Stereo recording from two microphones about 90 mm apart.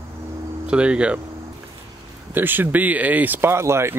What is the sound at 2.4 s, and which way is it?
Speech, 20° right (ahead or behind).